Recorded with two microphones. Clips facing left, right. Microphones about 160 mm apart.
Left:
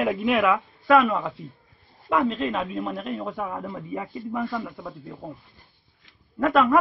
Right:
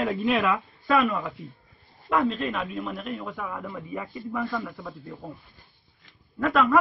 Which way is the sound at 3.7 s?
20° left (ahead or behind).